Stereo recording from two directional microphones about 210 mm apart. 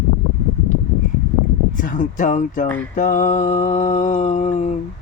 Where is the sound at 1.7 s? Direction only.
40° left (ahead or behind).